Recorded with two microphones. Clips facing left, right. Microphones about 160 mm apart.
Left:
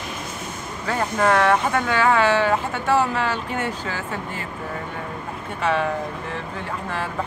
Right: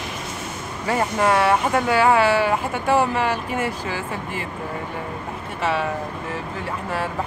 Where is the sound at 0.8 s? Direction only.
10° right (ahead or behind).